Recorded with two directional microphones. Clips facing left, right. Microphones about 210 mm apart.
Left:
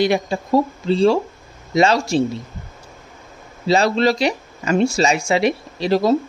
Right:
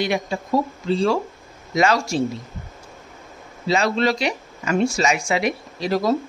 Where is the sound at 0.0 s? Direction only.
35° left (ahead or behind).